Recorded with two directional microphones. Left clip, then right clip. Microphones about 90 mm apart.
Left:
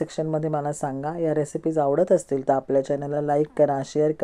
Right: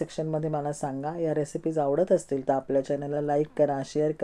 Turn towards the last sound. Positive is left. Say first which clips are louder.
# left 5 dB
turn(degrees=45)  # may be behind; listen again after turning